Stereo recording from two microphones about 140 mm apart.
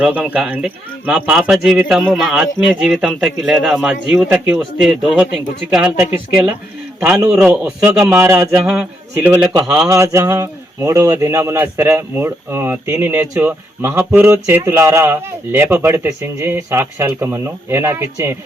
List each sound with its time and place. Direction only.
0.0 s a man's voice: 10° right (ahead or behind)
7.3 s speech: 10° right (ahead or behind)
8.6 s speech: 5° right (ahead or behind)
9.6 s speech: 20° right (ahead or behind)